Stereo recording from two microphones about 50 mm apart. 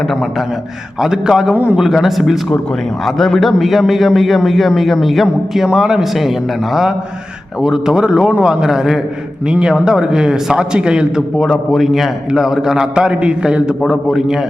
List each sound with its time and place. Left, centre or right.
1.0 s a man's voice: centre
5.6 s a man's voice: centre
7.6 s a man's voice: centre
11.3 s a man's voice: centre
13.8 s a man's voice: centre